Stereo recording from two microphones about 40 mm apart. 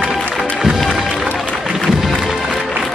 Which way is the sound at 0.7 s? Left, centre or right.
Centre.